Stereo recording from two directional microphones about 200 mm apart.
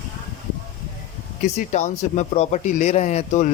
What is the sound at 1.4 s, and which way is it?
Speech, 35° left (ahead or behind).